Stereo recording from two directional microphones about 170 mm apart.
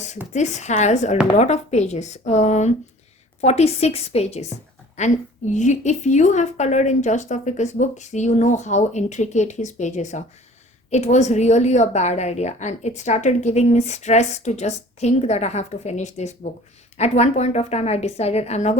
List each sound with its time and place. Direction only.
0.3 s a woman's voice: 45° left (ahead or behind)